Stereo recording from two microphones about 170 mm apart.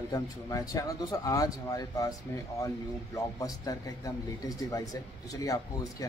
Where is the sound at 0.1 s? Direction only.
20° left (ahead or behind).